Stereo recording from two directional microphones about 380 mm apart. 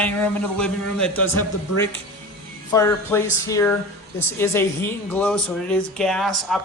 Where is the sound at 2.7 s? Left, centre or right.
Centre.